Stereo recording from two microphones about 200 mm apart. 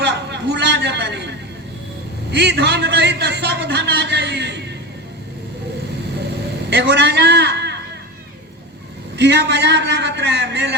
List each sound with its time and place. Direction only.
0.0 s a sound: 60° right (ahead or behind)
2.3 s a man's voice: 60° right (ahead or behind)
6.7 s a man's voice: 60° right (ahead or behind)
9.1 s a man's voice: 60° right (ahead or behind)